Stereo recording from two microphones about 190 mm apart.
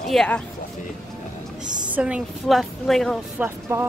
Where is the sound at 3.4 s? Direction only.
15° right (ahead or behind).